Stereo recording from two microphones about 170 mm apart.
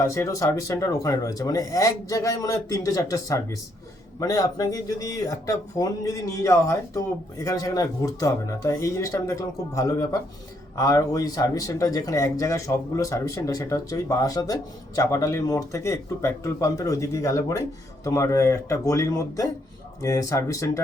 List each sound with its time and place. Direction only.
0.0 s speech: 20° left (ahead or behind)